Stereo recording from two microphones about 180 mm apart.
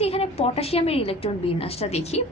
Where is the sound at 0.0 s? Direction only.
35° left (ahead or behind).